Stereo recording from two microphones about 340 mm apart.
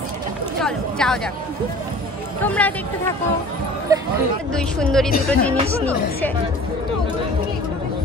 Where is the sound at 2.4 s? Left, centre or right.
Centre.